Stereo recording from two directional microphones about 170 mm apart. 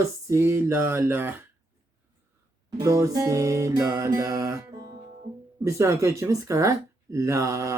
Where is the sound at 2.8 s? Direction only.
20° right (ahead or behind).